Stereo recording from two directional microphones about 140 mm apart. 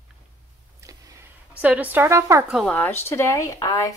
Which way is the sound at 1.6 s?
10° right (ahead or behind).